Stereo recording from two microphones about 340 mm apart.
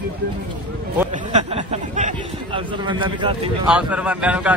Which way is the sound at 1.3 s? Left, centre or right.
Centre.